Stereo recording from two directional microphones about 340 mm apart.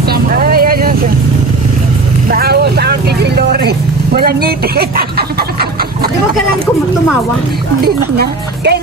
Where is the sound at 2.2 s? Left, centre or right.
Right.